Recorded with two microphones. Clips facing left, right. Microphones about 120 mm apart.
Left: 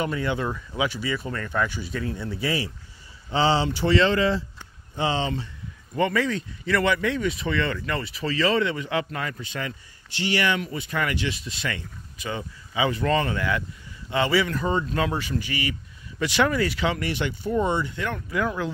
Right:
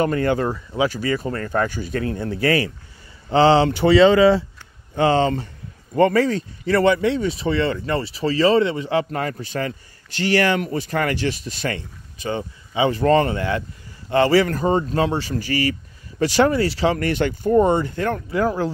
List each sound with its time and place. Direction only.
0.0 s speech: 50° right (ahead or behind)
0.5 s speech: 35° right (ahead or behind); by 4.5 s 70° right (ahead or behind)
4.9 s speech: 50° right (ahead or behind); by 13.7 s 30° right (ahead or behind)
14.1 s speech: 45° right (ahead or behind)
17.0 s speech: 50° right (ahead or behind)